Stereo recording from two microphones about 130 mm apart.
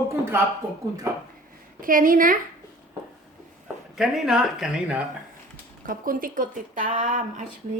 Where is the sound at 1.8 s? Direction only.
90° right.